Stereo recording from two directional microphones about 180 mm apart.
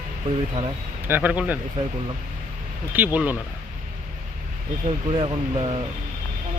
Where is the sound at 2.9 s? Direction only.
10° right (ahead or behind).